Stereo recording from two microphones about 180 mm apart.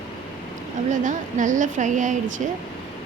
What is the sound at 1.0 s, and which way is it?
A woman's voice, 45° right (ahead or behind).